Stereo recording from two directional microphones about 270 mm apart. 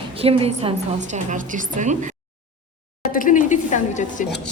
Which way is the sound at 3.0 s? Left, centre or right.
Left.